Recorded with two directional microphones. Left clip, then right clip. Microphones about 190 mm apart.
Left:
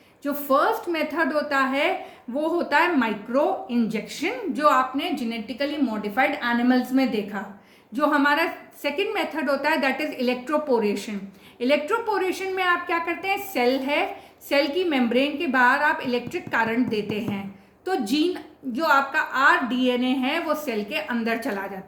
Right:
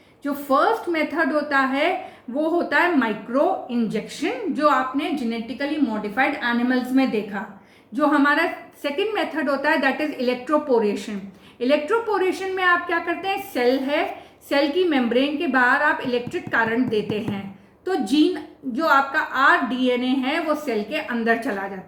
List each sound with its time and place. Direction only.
0.4 s speech: 40° left (ahead or behind)